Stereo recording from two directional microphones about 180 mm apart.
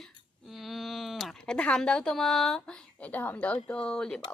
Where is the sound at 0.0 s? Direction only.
Centre (ahead or behind).